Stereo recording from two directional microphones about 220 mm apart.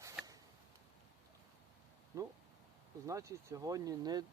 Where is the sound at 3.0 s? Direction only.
15° right (ahead or behind).